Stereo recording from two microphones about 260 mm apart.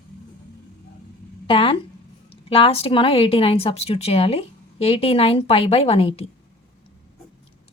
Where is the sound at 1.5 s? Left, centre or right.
Centre.